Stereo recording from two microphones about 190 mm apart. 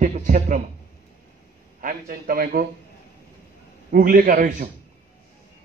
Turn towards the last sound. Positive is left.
turn(degrees=-50)  # may be behind; listen again after turning